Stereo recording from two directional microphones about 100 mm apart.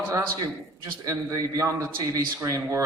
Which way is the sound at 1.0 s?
35° right (ahead or behind).